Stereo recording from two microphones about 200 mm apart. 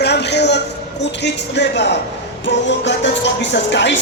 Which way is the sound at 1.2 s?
60° left (ahead or behind).